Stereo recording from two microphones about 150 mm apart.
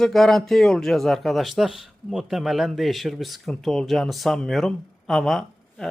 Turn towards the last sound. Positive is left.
turn(degrees=5)  # may be behind; listen again after turning